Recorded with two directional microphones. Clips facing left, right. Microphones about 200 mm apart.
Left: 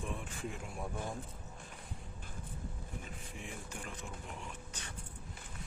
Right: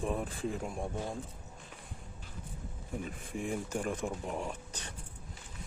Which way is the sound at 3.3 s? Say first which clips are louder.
Right 13 dB; 45° right (ahead or behind).